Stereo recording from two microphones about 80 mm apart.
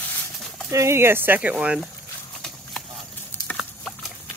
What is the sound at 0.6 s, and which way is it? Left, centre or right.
Speech, right.